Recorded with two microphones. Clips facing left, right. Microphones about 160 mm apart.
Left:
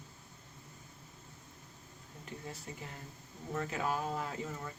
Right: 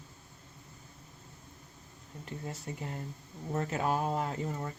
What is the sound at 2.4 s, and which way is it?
Speech, 40° right (ahead or behind).